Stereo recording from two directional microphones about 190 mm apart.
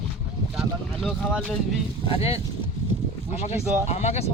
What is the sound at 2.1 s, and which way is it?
Speech, 30° left (ahead or behind).